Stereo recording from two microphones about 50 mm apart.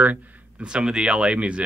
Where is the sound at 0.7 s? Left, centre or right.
Centre.